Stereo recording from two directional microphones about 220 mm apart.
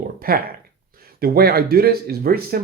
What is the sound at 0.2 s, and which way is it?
Speech, 40° right (ahead or behind).